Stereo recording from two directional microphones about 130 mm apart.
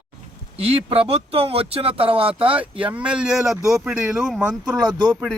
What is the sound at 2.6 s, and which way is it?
Speech, 10° right (ahead or behind).